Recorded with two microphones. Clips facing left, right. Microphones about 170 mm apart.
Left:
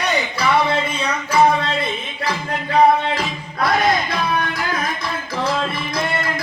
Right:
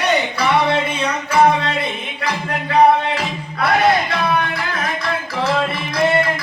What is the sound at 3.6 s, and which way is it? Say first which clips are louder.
Music: right 2 dB; 65° right (ahead or behind).